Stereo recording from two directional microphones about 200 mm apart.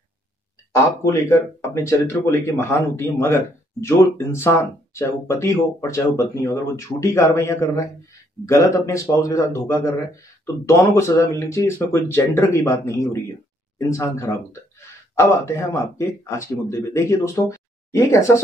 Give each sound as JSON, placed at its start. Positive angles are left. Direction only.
{"t": 0.7, "sound": "speech", "side_deg": 15}